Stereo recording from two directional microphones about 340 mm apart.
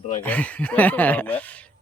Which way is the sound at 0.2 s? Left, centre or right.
Centre.